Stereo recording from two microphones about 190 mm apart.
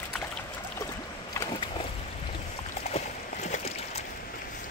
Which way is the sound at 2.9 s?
35° left (ahead or behind).